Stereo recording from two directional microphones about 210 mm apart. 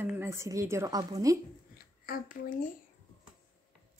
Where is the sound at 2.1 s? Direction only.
40° left (ahead or behind).